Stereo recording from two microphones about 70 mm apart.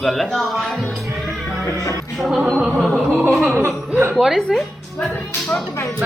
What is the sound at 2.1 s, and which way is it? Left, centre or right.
A woman's voice, centre.